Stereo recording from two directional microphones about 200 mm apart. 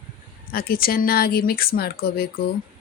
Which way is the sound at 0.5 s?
50° left (ahead or behind).